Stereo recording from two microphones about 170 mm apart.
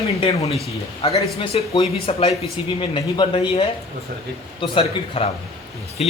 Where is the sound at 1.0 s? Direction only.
35° left (ahead or behind).